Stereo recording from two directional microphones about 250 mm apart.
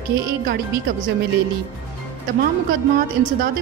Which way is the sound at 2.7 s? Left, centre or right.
Right.